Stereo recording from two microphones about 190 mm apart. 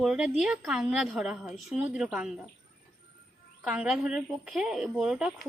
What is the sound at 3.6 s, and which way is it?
A woman's voice, centre (ahead or behind).